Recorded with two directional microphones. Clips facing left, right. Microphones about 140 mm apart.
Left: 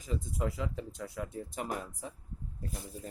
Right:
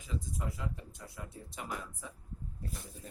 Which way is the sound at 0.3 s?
90° left.